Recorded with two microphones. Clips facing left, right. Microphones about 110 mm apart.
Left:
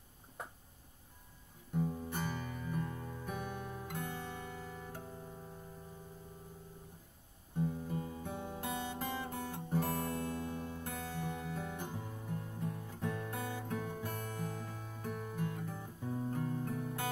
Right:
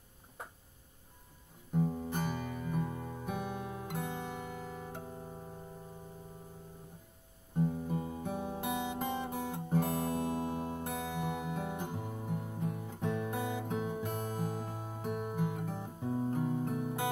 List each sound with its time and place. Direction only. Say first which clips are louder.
1.8 s music: right 4 dB; 20° right (ahead or behind)
3.3 s music: right 4 dB; 15° right (ahead or behind)
4.5 s music: right 4 dB; 45° right (ahead or behind)
4.9 s music: right 3 dB; 25° right (ahead or behind)
7.5 s guitar: right 4 dB; 25° right (ahead or behind)
10.8 s music: right 5 dB; 20° right (ahead or behind)